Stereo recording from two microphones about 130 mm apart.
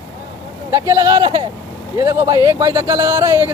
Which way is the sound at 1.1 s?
35° right (ahead or behind).